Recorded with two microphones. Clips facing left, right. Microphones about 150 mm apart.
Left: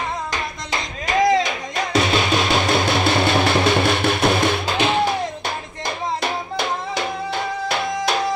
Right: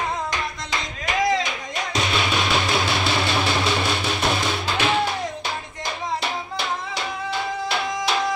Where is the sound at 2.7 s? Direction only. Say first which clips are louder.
Left 4 dB; 50° left (ahead or behind).